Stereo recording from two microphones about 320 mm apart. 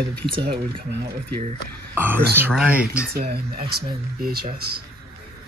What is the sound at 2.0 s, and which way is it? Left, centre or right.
Speech, centre.